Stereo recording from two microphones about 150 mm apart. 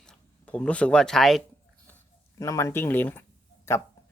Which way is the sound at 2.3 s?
20° left (ahead or behind).